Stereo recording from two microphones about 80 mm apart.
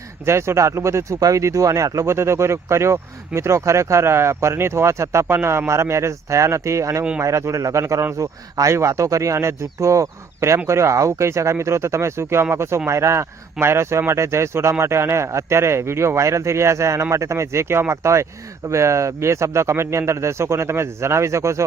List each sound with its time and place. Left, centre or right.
0.3 s speech: right